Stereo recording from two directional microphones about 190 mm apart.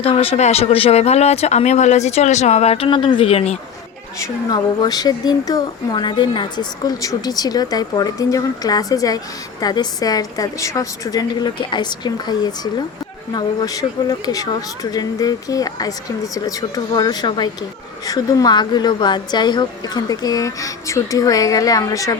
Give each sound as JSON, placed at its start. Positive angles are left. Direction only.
{"t": 0.0, "sound": "speech", "side_deg": 30}
{"t": 4.2, "sound": "a woman's voice", "side_deg": 20}